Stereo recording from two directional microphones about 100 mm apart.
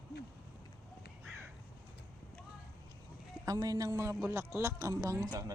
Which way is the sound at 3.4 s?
40° right (ahead or behind).